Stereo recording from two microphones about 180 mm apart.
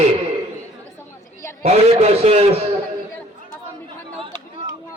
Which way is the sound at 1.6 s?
35° right (ahead or behind).